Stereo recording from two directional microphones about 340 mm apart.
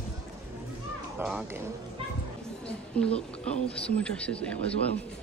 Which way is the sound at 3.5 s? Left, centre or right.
Centre.